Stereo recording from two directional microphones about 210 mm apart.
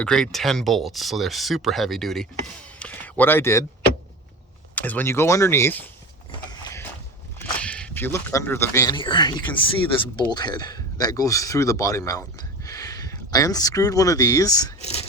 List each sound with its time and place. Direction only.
0.0 s speech: 5° left (ahead or behind)
4.7 s speech: 10° left (ahead or behind)
6.5 s mechanisms: 20° left (ahead or behind)
7.3 s speech: 5° left (ahead or behind)
14.8 s speech: 30° left (ahead or behind)